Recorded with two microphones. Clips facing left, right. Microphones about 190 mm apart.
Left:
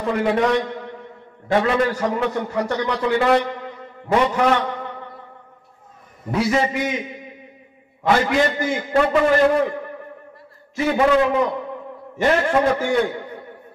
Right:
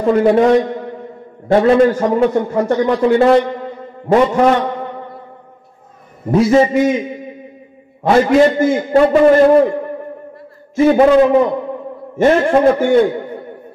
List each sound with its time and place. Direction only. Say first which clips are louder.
0.0 s a man's voice: right 8 dB; 35° right (ahead or behind)
1.9 s a man's voice: right 7 dB; 40° right (ahead or behind)
2.1 s a man's voice: right 8 dB; 30° right (ahead or behind)
6.4 s a man's voice: right 9 dB; 30° right (ahead or behind)
8.1 s a man's voice: right 8 dB; 30° right (ahead or behind)
10.9 s a man's voice: right 7 dB; 35° right (ahead or behind)